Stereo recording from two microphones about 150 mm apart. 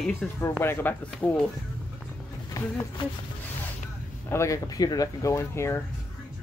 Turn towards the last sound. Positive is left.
turn(degrees=15)  # may be behind; listen again after turning